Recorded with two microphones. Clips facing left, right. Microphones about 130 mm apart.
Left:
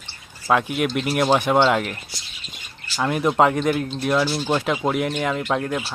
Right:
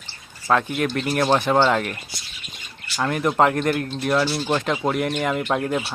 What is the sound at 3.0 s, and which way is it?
Speech, 10° left (ahead or behind).